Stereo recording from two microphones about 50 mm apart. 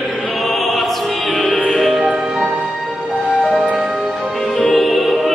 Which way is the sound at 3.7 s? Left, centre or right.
Right.